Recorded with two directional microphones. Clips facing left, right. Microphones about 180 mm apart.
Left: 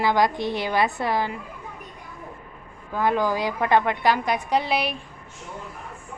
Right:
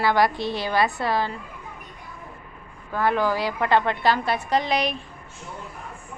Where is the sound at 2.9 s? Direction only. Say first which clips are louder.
Even; 15° left (ahead or behind).